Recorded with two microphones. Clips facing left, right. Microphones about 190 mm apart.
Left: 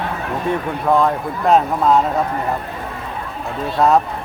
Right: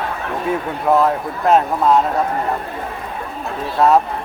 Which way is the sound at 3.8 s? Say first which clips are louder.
Right 1 dB; centre (ahead or behind).